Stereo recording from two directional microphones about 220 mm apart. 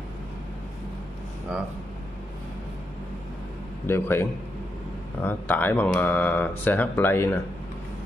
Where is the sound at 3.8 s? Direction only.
10° left (ahead or behind).